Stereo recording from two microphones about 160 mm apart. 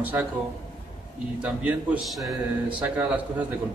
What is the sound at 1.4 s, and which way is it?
A man's voice, 10° right (ahead or behind).